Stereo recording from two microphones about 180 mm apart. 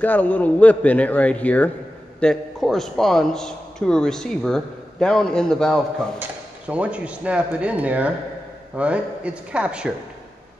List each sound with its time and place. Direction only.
0.0 s a man's voice: 10° left (ahead or behind)